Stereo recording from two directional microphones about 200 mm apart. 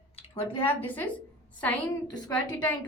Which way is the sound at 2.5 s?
10° left (ahead or behind).